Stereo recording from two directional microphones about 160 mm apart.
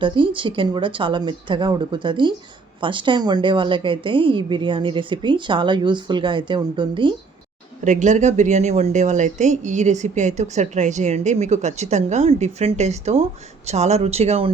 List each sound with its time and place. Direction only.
0.0 s a woman's voice: 30° right (ahead or behind)
7.9 s a woman's voice: 50° right (ahead or behind)